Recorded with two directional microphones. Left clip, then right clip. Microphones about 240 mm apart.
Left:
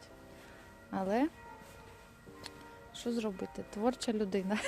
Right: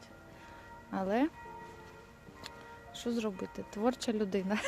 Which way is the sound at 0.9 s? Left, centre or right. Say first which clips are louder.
Right 1 dB; centre.